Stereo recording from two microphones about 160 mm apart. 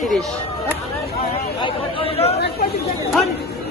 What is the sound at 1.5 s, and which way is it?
Chatter, 35° left (ahead or behind).